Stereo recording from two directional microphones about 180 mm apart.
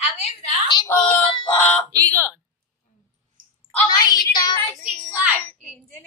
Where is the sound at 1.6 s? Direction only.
5° left (ahead or behind).